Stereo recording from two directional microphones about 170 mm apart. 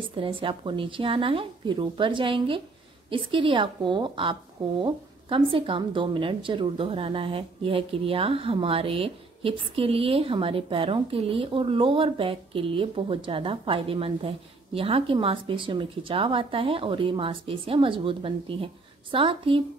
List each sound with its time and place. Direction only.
0.0 s a woman's voice: 30° right (ahead or behind)